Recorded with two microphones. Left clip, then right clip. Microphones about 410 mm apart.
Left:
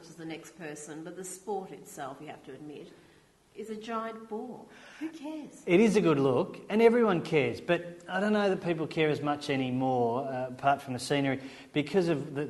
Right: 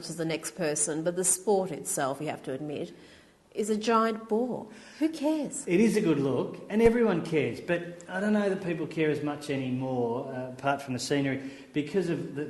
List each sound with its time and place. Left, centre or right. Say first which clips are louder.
0.2 s a woman's voice: right 11 dB; right
3.7 s a woman's voice: right 11 dB; right
5.2 s a woman's voice: right 12 dB; right
5.6 s speech: left 2 dB; left
10.6 s speech: left 1 dB; left